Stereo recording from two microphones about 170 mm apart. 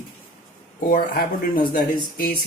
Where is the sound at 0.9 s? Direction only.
55° left (ahead or behind).